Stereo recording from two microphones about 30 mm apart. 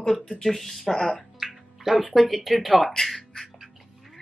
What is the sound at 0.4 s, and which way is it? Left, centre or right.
Speech, centre.